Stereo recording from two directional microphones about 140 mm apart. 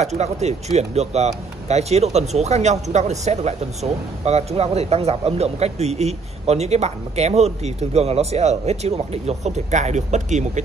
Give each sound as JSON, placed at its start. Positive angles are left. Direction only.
{"t": 0.0, "sound": "speech", "side_deg": -55}